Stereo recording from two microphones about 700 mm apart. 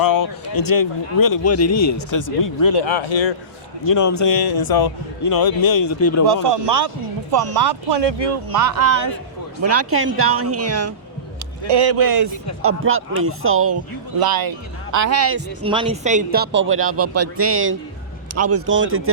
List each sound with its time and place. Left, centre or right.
0.0 s speech: left
2.8 s speech: left
3.8 s speech: left
6.2 s speech: right
11.7 s speech: right
14.2 s speech: right